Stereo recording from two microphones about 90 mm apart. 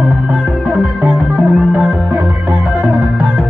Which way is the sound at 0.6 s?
15° right (ahead or behind).